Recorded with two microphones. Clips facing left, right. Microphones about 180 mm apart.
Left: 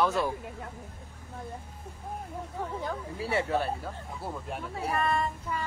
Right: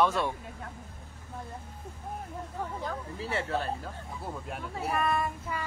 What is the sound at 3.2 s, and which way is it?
Speech, 10° left (ahead or behind).